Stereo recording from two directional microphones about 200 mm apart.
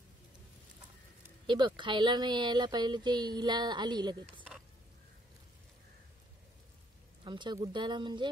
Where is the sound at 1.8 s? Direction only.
25° right (ahead or behind).